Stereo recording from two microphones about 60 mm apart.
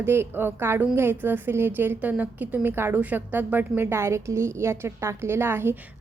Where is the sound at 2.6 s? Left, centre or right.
Right.